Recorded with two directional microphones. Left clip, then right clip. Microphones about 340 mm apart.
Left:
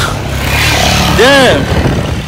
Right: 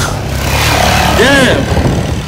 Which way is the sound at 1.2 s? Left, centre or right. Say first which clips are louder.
Left 6 dB; centre.